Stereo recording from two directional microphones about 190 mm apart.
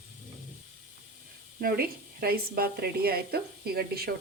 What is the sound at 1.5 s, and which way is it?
A woman's voice, 50° right (ahead or behind).